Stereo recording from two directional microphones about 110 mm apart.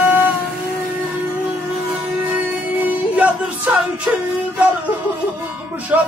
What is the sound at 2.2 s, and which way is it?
Music, 15° right (ahead or behind).